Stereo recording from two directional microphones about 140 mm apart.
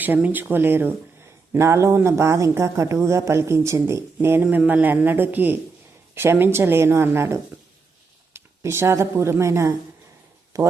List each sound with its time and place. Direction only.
0.0 s speech: 10° right (ahead or behind)